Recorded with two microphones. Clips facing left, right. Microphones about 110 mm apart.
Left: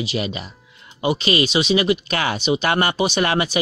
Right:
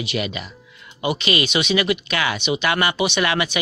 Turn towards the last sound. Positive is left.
turn(degrees=35)  # may be behind; listen again after turning